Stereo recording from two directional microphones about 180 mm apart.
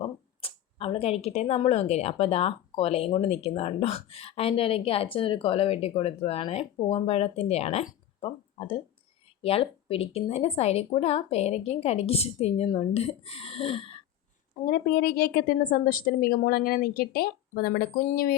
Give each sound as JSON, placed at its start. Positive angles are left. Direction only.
{"t": 0.0, "sound": "speech", "side_deg": 30}
{"t": 14.6, "sound": "a woman's voice", "side_deg": 55}